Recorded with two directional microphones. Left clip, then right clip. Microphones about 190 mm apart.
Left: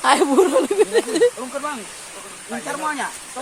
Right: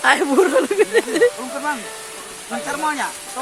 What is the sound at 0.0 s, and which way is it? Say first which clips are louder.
Speech: even; centre (ahead or behind).